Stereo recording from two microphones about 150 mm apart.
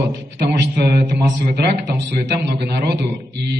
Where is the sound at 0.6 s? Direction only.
90° right.